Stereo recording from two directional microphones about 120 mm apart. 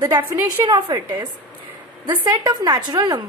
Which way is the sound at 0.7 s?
40° right (ahead or behind).